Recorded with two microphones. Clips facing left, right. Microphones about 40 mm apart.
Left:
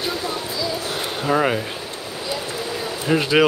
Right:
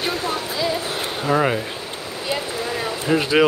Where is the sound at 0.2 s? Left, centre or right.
Right.